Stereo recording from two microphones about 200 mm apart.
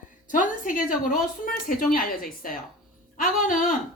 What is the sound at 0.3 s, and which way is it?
Speech, 40° left (ahead or behind).